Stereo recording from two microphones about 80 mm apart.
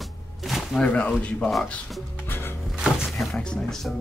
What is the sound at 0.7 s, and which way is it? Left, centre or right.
Speech, centre.